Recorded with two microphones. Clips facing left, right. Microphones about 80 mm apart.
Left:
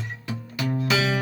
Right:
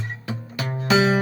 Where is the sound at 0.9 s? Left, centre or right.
Right.